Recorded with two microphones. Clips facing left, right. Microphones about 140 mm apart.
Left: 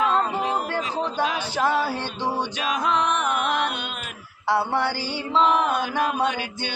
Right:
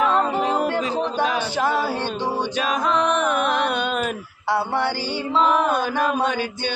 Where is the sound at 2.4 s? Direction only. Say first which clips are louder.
Right 3 dB; 45° right (ahead or behind).